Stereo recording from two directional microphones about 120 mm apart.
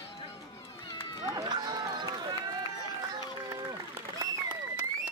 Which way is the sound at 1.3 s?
35° right (ahead or behind).